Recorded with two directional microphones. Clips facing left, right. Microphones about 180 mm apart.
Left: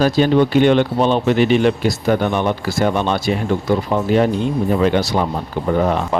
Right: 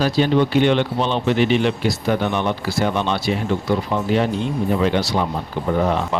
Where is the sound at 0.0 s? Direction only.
45° left (ahead or behind).